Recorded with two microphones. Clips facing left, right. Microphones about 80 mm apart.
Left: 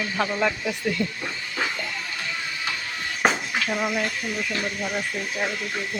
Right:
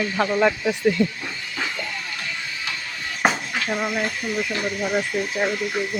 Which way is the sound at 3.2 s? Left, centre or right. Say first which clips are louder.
Right 1 dB; centre.